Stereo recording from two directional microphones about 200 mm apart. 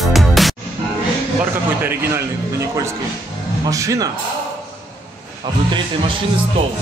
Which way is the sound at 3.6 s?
15° right (ahead or behind).